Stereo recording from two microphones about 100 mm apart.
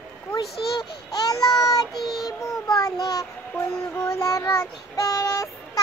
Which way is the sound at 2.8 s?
40° left (ahead or behind).